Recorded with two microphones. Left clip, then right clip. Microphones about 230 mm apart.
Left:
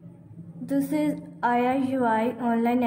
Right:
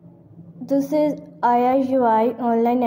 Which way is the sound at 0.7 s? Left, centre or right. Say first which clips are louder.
Right 7 dB; centre.